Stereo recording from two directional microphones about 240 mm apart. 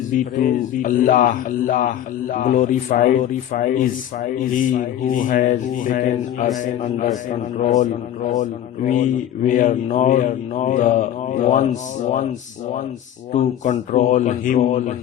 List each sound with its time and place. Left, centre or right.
0.4 s speech: left
13.3 s speech: left